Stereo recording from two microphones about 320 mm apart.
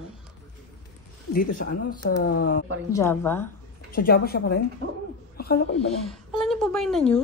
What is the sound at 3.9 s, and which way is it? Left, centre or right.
Speech, left.